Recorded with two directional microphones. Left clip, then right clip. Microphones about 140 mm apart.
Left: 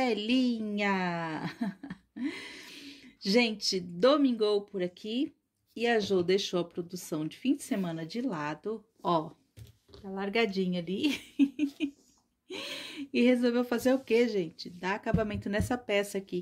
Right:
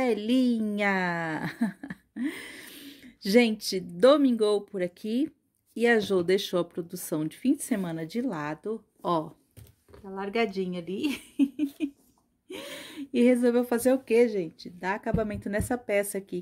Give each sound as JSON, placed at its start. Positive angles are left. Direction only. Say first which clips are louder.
{"t": 0.0, "sound": "a woman's voice", "louder": "right 3 dB", "side_deg": -25}
{"t": 0.4, "sound": "speech", "louder": "right 4 dB", "side_deg": -40}
{"t": 7.7, "sound": "a woman's voice", "louder": "right 3 dB", "side_deg": -35}
{"t": 10.0, "sound": "speech", "louder": "right 1 dB", "side_deg": 0}